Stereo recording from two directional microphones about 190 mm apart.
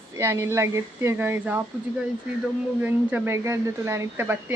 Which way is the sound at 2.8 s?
10° right (ahead or behind).